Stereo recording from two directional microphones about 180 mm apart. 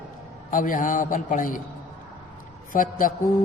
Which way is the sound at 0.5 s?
50° left (ahead or behind).